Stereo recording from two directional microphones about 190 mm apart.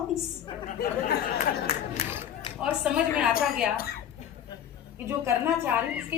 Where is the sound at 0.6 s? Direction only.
55° left (ahead or behind).